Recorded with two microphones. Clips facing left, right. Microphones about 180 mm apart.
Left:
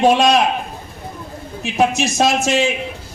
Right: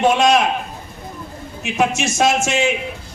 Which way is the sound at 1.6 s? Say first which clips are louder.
Left 2 dB; 35° left (ahead or behind).